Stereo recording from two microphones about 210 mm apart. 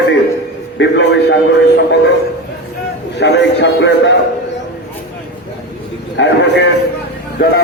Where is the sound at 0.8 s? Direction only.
55° left (ahead or behind).